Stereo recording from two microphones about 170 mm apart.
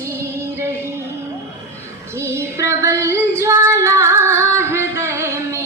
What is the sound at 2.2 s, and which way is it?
Female singing, 15° right (ahead or behind).